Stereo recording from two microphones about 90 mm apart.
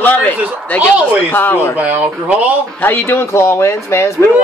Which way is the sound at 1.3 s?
20° left (ahead or behind).